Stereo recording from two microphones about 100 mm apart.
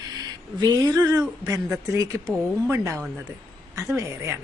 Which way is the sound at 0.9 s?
35° right (ahead or behind).